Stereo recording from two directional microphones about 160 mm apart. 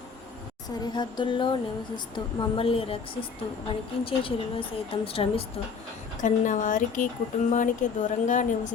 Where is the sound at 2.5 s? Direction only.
35° left (ahead or behind).